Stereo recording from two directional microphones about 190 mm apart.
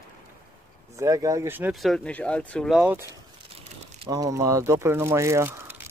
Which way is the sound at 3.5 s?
35° right (ahead or behind).